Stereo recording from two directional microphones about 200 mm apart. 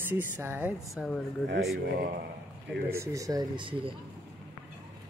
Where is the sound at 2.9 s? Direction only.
15° right (ahead or behind).